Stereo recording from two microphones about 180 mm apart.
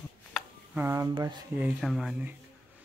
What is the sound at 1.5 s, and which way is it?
Speech, 5° right (ahead or behind).